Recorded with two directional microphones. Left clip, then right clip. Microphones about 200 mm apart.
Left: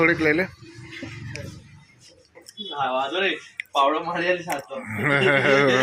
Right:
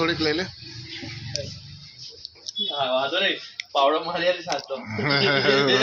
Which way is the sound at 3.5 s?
15° right (ahead or behind).